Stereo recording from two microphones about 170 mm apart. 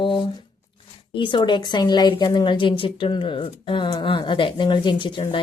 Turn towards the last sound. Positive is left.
turn(degrees=30)  # may be behind; listen again after turning